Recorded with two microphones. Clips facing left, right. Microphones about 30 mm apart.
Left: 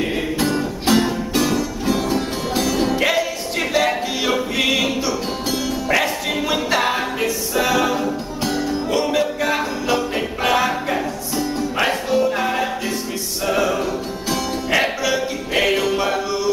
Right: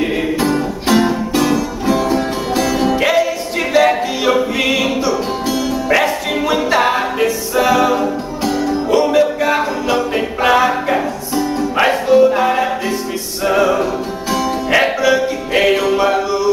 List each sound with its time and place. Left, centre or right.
0.0 s music: centre
6.4 s music: centre